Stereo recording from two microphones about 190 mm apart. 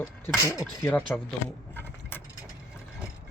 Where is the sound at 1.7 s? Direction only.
10° left (ahead or behind).